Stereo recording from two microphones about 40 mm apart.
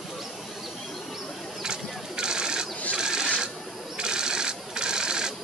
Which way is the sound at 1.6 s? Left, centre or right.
Centre.